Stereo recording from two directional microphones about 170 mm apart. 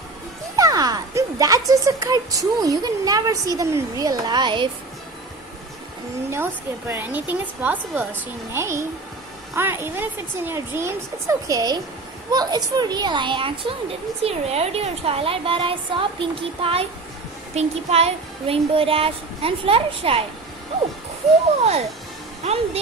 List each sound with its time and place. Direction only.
0.6 s speech: 20° right (ahead or behind)
6.3 s a woman's voice: 15° right (ahead or behind); by 20.2 s 35° right (ahead or behind)
22.4 s speech: 40° right (ahead or behind)